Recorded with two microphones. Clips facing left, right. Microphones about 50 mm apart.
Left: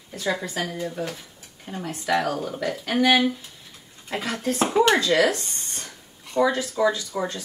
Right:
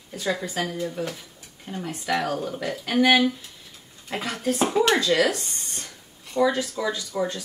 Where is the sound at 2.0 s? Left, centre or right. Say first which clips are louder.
Left 2 dB; centre.